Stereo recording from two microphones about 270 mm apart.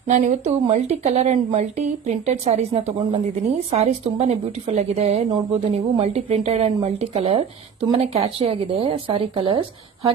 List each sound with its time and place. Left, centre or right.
0.1 s a woman's voice: right